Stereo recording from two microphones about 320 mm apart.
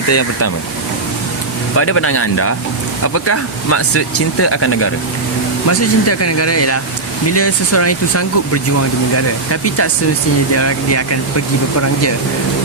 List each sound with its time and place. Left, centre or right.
0.1 s speech: left
1.7 s speech: left